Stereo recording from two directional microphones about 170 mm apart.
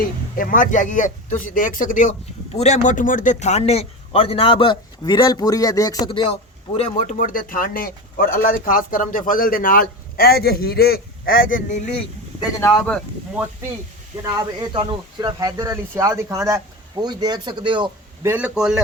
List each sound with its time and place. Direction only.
0.3 s speech: 50° left (ahead or behind); by 6.3 s 30° left (ahead or behind)
6.7 s a man's voice: 45° left (ahead or behind)
12.5 s speech: 20° left (ahead or behind)
14.6 s speech: 30° right (ahead or behind)
18.2 s a man's voice: 10° right (ahead or behind)